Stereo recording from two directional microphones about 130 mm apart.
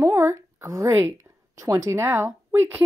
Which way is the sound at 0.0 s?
20° right (ahead or behind).